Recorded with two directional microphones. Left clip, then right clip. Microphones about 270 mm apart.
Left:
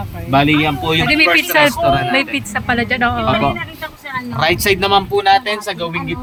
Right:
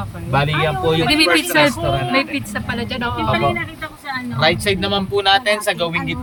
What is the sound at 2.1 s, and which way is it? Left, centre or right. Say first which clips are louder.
Speech: left 3 dB; centre.